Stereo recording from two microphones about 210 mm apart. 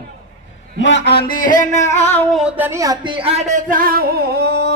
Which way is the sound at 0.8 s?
60° left (ahead or behind).